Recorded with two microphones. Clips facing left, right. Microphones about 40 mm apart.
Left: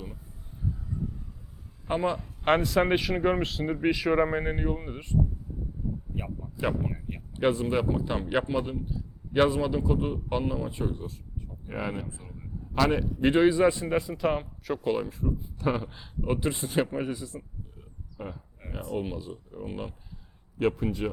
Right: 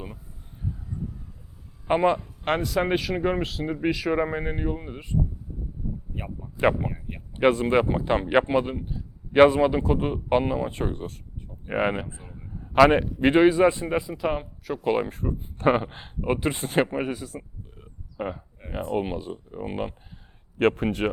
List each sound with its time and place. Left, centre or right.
1.9 s speech: right
2.2 s speech: centre
6.1 s speech: centre
7.5 s speech: right
10.8 s speech: right
11.3 s a sound: right
12.0 s speech: right
12.7 s a man's voice: right
13.0 s a man's voice: right
14.0 s speech: centre
14.8 s speech: right
15.1 s speech: right
16.2 s speech: right
20.6 s speech: right